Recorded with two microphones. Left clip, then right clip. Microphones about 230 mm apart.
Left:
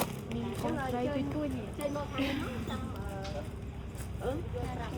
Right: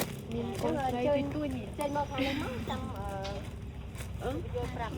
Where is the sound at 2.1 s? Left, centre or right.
Centre.